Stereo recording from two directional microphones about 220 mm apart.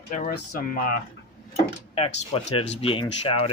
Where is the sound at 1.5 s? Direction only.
25° left (ahead or behind).